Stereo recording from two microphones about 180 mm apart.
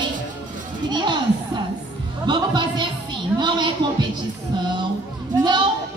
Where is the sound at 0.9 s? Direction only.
25° right (ahead or behind).